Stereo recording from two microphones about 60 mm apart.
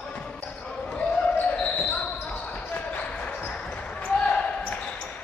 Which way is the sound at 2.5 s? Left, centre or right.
Left.